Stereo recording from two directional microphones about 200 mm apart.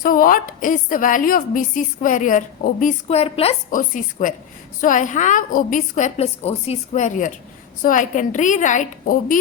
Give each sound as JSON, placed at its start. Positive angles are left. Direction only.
{"t": 0.0, "sound": "a woman's voice", "side_deg": 45}
{"t": 3.7, "sound": "a woman's voice", "side_deg": 40}